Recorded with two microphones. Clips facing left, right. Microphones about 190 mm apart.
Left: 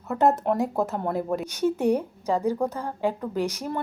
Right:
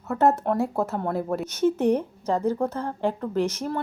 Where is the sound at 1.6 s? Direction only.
15° left (ahead or behind).